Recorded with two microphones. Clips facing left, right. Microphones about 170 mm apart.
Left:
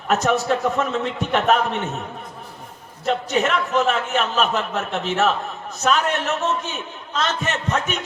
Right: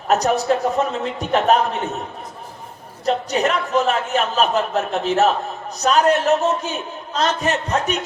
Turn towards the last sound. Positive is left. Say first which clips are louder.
# right 3 dB
turn(degrees=-35)  # may be behind; listen again after turning